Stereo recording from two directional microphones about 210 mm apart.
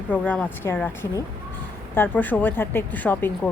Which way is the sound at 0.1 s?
10° left (ahead or behind).